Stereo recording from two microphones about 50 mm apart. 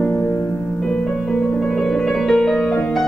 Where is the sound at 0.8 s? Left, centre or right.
Centre.